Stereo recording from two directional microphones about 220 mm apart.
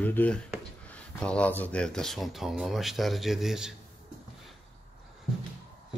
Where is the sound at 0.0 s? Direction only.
5° left (ahead or behind).